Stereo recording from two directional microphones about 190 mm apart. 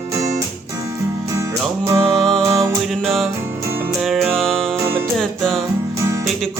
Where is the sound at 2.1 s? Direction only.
Centre (ahead or behind).